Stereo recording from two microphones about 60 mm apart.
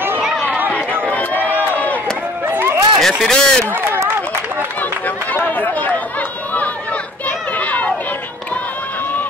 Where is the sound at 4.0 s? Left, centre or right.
Right.